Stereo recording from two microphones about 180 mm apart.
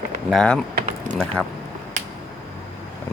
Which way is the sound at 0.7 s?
45° right (ahead or behind).